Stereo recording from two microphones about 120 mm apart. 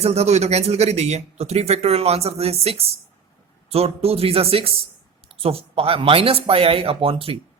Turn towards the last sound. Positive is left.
turn(degrees=-50)  # may be behind; listen again after turning